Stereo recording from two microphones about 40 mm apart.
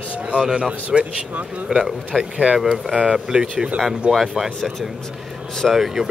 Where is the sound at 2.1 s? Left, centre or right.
Right.